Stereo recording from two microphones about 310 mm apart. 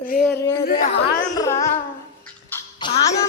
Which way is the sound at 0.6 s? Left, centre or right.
Left.